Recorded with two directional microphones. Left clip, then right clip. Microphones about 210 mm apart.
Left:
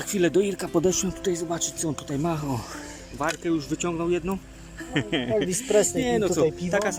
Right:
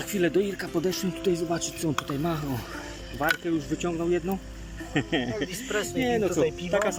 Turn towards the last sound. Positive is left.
turn(degrees=0)  # may be behind; listen again after turning